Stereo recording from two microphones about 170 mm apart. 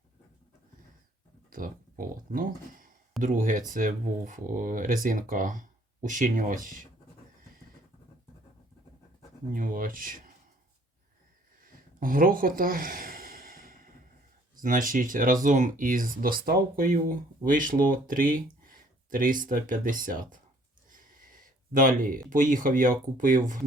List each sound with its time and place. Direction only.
1.5 s speech: 55° right (ahead or behind)
9.5 s speech: 55° right (ahead or behind)
11.9 s sigh: 55° right (ahead or behind)
14.6 s speech: 50° right (ahead or behind)
20.9 s a sound: 55° right (ahead or behind)
22.3 s speech: 50° right (ahead or behind)